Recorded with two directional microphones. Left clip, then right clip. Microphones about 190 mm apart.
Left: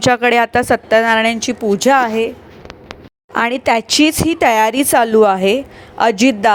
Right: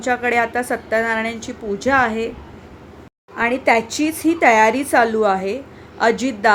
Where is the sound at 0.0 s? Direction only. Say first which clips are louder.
Left 6 dB; 50° left (ahead or behind).